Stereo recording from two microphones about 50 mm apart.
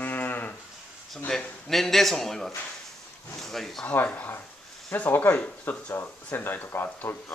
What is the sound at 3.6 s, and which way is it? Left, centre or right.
Speech, centre.